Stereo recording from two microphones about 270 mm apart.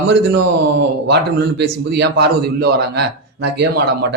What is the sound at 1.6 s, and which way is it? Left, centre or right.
A man's voice, right.